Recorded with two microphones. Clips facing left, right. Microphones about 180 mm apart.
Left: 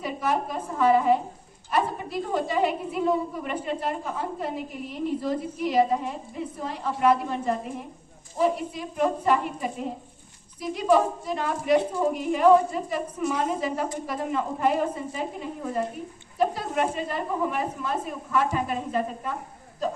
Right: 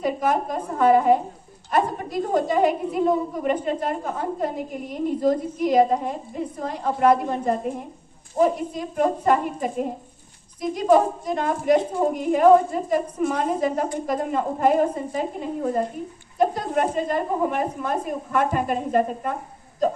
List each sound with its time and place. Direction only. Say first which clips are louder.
0.0 s a woman's voice: right 4 dB; 50° right (ahead or behind)